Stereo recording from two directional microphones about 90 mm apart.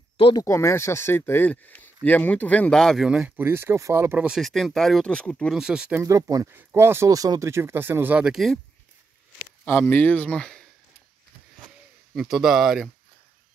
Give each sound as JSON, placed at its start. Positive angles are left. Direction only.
{"t": 0.4, "sound": "speech", "side_deg": 35}
{"t": 3.1, "sound": "speech", "side_deg": -10}
{"t": 3.3, "sound": "speech", "side_deg": -25}
{"t": 4.4, "sound": "speech", "side_deg": 0}
{"t": 5.5, "sound": "speech", "side_deg": -10}
{"t": 6.0, "sound": "speech", "side_deg": -40}
{"t": 6.5, "sound": "speech", "side_deg": -30}
{"t": 8.4, "sound": "speech", "side_deg": 0}
{"t": 9.7, "sound": "speech", "side_deg": 20}
{"t": 12.2, "sound": "speech", "side_deg": -5}